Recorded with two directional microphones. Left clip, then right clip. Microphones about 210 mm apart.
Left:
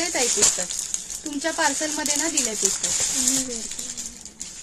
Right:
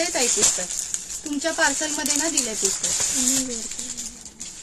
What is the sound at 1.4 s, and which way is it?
A woman's voice, 5° right (ahead or behind).